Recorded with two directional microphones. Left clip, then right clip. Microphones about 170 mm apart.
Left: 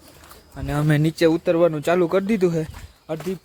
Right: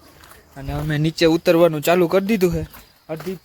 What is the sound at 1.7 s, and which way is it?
Speech, 15° right (ahead or behind).